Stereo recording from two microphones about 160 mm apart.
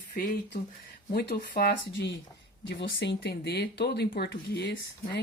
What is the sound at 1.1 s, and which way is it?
Speech, 75° left (ahead or behind).